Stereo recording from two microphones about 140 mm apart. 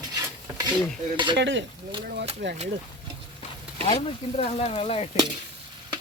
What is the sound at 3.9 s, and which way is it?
Speech, 45° left (ahead or behind).